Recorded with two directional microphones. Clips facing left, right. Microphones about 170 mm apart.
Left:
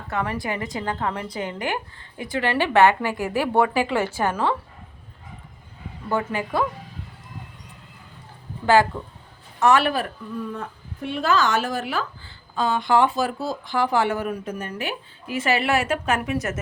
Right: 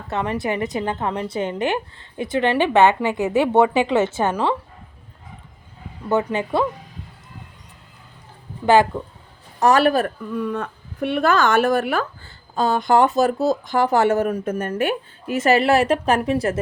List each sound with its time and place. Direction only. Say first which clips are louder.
0.1 s a woman's voice: right 4 dB; 25° right (ahead or behind)
6.1 s a woman's voice: right 5 dB; 20° right (ahead or behind)
8.6 s a woman's voice: right 3 dB; 20° right (ahead or behind)
9.6 s a man's voice: right 3 dB; 40° right (ahead or behind)
10.3 s speech: right 5 dB; 70° right (ahead or behind); by 16.6 s 30° right (ahead or behind)